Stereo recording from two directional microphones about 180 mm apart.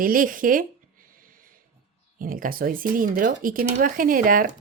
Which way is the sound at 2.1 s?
50° right (ahead or behind).